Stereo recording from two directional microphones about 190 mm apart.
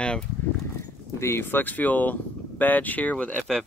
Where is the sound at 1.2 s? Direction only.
10° left (ahead or behind).